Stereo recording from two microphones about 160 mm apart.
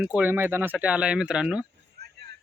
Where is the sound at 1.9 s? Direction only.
90° right.